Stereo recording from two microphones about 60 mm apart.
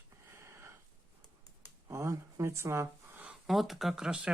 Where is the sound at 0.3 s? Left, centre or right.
Right.